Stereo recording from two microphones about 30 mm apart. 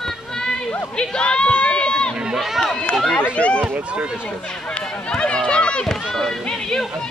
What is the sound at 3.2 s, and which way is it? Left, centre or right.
Speech, left.